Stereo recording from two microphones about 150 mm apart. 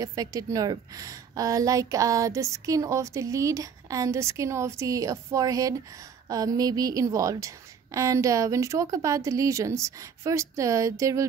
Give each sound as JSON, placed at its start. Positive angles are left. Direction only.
{"t": 0.0, "sound": "a woman's voice", "side_deg": -25}